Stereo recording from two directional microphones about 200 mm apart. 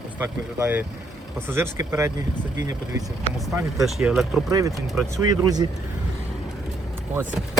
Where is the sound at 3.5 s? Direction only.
15° right (ahead or behind).